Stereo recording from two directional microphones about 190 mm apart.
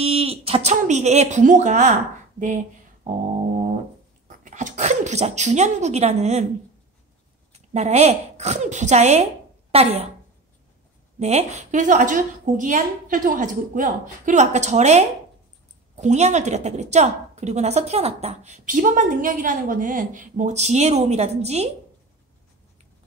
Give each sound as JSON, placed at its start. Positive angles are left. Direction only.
{"t": 0.0, "sound": "speech", "side_deg": -30}
{"t": 4.3, "sound": "speech", "side_deg": -40}
{"t": 7.5, "sound": "a woman's voice", "side_deg": -35}
{"t": 11.1, "sound": "a woman's voice", "side_deg": -35}